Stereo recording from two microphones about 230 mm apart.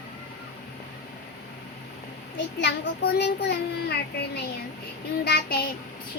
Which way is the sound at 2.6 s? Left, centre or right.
Left.